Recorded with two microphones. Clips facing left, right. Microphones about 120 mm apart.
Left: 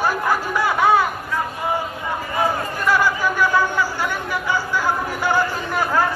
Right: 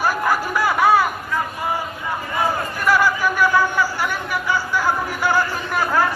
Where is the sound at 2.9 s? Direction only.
20° left (ahead or behind).